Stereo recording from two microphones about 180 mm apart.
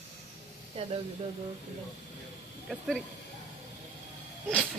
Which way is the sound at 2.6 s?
Centre (ahead or behind).